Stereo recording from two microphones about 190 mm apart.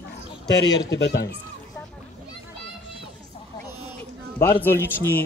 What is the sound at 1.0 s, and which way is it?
Speech, 60° left (ahead or behind).